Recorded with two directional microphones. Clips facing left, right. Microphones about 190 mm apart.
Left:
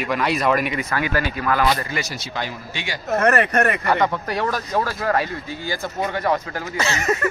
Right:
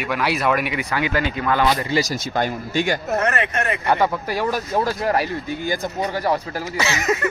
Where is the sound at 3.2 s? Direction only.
55° left (ahead or behind).